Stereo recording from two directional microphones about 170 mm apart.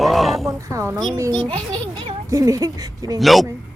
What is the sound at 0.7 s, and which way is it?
Speech, 20° right (ahead or behind).